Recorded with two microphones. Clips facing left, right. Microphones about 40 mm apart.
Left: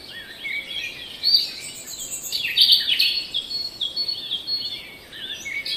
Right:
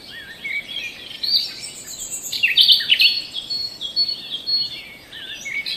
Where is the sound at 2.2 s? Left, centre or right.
Right.